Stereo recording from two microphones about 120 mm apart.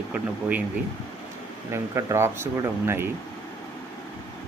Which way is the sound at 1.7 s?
25° right (ahead or behind).